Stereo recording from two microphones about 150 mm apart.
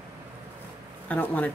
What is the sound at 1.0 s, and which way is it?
Speech, 10° left (ahead or behind).